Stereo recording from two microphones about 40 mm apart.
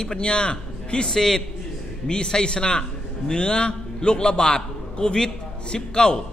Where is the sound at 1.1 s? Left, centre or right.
Centre.